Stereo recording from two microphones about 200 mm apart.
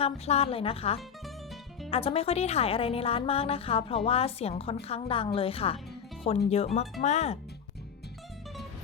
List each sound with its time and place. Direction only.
0.0 s speech: 30° left (ahead or behind)